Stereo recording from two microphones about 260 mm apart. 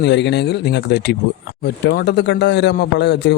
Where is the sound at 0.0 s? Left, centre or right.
Left.